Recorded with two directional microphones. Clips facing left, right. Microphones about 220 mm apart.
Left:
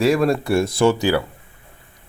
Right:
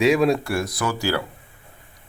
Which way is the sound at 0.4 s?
25° left (ahead or behind).